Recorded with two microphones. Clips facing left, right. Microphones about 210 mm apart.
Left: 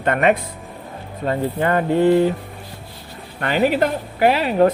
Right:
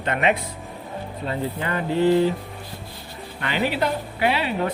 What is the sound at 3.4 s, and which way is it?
Speech, 45° left (ahead or behind).